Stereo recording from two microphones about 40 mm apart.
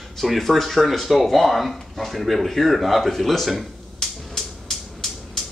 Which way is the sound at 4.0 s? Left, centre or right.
Centre.